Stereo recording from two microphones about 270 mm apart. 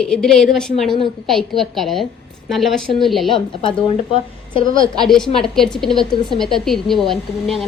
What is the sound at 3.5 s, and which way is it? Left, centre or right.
Speech, centre.